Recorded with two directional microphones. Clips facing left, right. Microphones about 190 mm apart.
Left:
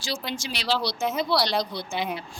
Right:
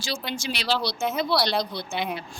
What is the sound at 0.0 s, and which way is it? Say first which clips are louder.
Speech: right 1 dB; 60° right (ahead or behind).